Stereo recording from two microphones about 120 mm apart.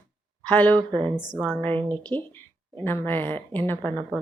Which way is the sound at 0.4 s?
15° left (ahead or behind).